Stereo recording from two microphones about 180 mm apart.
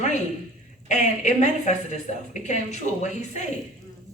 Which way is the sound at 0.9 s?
40° left (ahead or behind).